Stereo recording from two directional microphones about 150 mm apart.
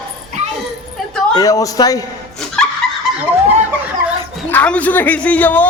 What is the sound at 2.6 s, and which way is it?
Dog, 5° left (ahead or behind).